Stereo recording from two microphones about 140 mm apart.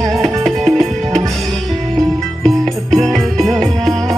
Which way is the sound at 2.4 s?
5° left (ahead or behind).